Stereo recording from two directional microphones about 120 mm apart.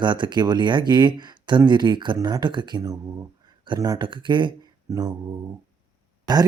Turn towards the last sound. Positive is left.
turn(degrees=-35)  # may be behind; listen again after turning